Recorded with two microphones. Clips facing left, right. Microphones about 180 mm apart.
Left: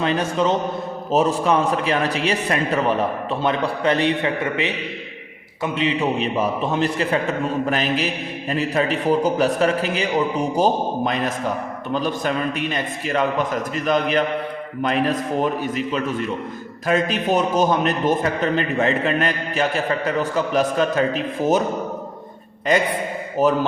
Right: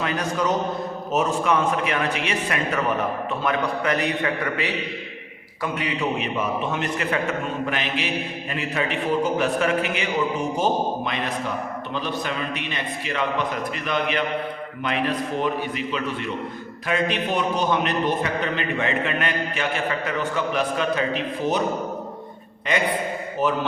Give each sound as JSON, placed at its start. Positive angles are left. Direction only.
{"t": 0.0, "sound": "a man's voice", "side_deg": 30}
{"t": 23.4, "sound": "a man's voice", "side_deg": 40}